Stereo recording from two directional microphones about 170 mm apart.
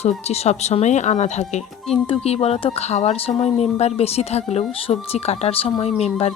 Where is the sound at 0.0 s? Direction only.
40° left (ahead or behind).